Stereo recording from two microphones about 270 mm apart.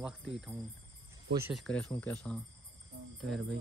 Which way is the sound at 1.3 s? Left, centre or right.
Centre.